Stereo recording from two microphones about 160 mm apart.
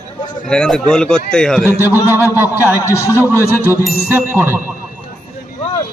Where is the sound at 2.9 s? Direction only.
20° left (ahead or behind).